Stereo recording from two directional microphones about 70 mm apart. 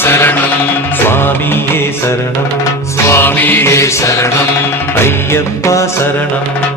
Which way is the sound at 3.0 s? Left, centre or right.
Left.